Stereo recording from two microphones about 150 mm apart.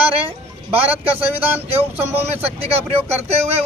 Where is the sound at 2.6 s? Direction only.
45° right (ahead or behind).